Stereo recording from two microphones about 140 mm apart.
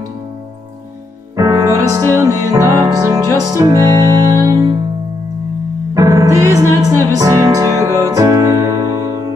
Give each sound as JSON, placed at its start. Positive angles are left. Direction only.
{"t": 1.3, "sound": "music", "side_deg": -20}
{"t": 5.9, "sound": "music", "side_deg": -20}